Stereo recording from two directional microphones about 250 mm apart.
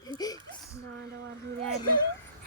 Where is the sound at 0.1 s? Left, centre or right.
Centre.